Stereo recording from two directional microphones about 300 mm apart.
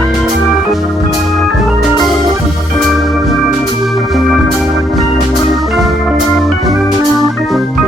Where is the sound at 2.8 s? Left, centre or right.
Centre.